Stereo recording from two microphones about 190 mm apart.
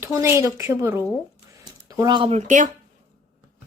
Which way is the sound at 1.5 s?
20° right (ahead or behind).